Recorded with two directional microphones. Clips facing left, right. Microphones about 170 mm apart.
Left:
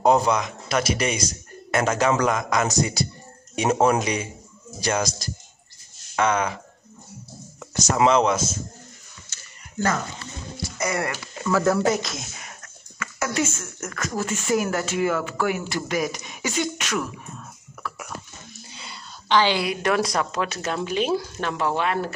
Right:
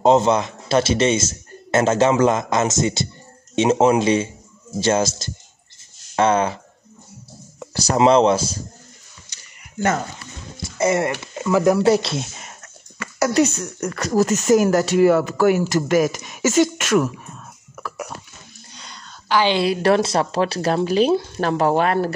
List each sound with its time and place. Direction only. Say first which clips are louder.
0.0 s a man's voice: right 4 dB; 25° right (ahead or behind)
7.7 s speech: right 4 dB; 30° right (ahead or behind)
9.3 s a sound: right 1 dB; 15° right (ahead or behind)
10.6 s music: right 7 dB; 25° right (ahead or behind)
11.4 s speech: right 4 dB; 15° right (ahead or behind)
11.8 s speech: right 6 dB; 30° right (ahead or behind); by 17.1 s 45° right (ahead or behind)
19.4 s speech: right 5 dB; 25° right (ahead or behind); by 22.1 s 40° right (ahead or behind)